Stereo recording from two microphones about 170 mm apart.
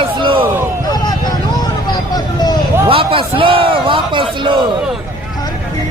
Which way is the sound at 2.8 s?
30° right (ahead or behind).